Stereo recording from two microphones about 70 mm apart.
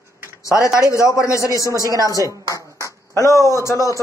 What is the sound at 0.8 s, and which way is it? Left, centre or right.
Speech, left.